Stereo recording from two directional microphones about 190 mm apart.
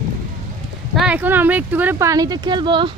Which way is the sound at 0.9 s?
5° right (ahead or behind).